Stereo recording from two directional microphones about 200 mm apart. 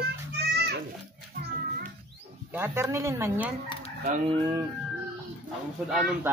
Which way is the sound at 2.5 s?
10° right (ahead or behind).